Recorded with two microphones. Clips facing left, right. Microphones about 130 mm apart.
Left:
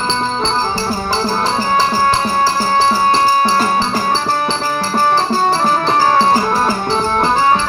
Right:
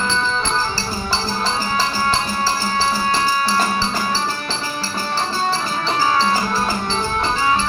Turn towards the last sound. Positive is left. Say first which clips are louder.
# left 6 dB
turn(degrees=50)  # may be behind; listen again after turning